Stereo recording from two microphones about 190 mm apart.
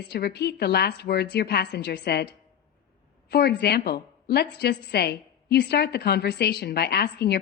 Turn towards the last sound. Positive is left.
turn(degrees=60)  # may be behind; listen again after turning